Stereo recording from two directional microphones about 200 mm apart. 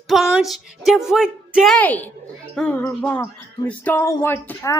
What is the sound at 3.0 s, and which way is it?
Speech, 5° left (ahead or behind).